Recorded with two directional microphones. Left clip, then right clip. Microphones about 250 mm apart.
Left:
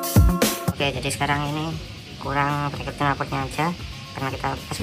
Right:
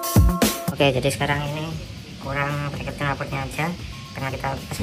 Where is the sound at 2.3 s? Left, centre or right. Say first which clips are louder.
Left 3 dB; centre.